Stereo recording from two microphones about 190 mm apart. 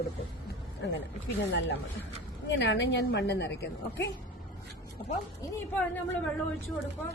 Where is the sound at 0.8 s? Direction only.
65° left (ahead or behind).